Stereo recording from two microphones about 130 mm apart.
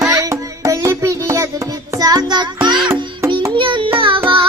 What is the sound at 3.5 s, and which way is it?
Child singing, 40° right (ahead or behind).